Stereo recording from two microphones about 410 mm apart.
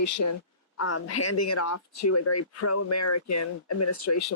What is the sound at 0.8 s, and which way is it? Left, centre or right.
Speech, left.